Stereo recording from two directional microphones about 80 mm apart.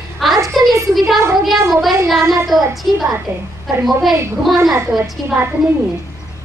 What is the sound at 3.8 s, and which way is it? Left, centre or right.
Speech, centre.